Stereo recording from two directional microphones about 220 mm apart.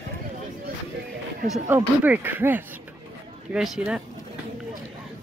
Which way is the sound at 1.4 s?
10° right (ahead or behind).